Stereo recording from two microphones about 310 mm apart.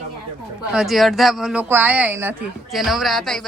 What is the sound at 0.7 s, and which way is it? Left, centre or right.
A woman's voice, centre.